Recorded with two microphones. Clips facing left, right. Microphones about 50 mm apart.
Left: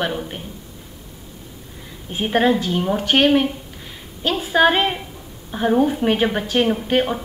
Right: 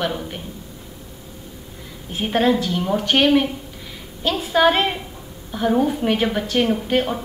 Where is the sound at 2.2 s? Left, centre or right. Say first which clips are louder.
Left 1 dB; left.